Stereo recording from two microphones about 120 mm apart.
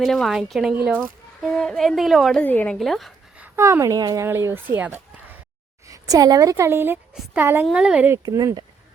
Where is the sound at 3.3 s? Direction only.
15° right (ahead or behind).